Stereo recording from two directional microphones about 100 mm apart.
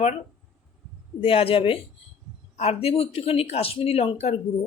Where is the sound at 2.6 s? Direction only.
85° left.